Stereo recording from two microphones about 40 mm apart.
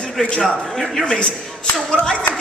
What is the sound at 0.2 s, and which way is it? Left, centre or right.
A woman's voice, centre.